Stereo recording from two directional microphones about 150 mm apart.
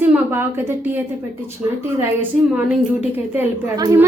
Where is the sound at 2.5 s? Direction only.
10° right (ahead or behind).